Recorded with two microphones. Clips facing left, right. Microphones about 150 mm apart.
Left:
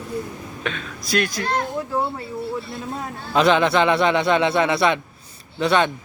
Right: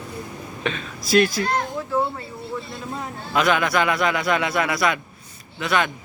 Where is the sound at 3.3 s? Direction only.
30° left (ahead or behind).